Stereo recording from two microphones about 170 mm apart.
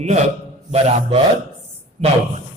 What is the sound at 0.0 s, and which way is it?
A man's voice, 40° right (ahead or behind).